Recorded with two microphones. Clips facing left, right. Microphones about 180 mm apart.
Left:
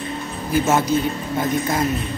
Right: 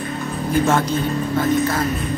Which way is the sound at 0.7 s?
10° left (ahead or behind).